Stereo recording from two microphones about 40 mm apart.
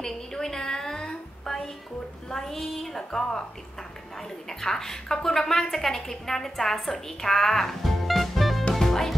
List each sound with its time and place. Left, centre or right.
0.0 s a sound: centre
2.3 s a woman's voice: centre
3.0 s a woman's voice: centre
4.5 s a woman's voice: centre
8.7 s music: centre